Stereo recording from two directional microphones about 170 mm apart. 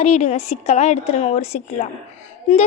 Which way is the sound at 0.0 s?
40° left (ahead or behind).